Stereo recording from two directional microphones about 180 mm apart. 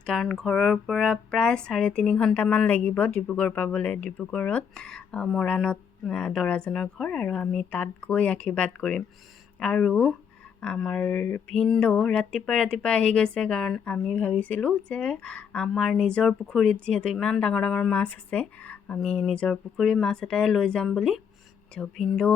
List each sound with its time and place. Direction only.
0.0 s speech: 5° left (ahead or behind)